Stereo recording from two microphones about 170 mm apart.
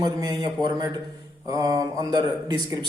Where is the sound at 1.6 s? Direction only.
25° right (ahead or behind).